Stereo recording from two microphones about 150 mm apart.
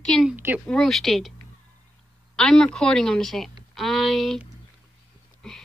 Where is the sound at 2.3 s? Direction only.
5° left (ahead or behind).